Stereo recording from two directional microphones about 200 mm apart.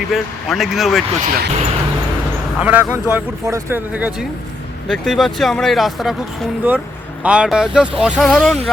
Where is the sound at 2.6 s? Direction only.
10° right (ahead or behind).